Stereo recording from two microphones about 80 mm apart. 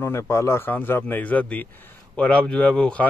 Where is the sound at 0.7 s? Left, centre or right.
Left.